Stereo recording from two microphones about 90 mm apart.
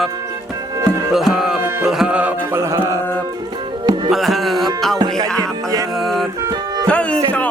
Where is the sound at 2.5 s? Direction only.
30° right (ahead or behind).